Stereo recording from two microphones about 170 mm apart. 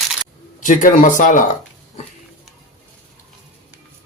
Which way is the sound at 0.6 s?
50° left (ahead or behind).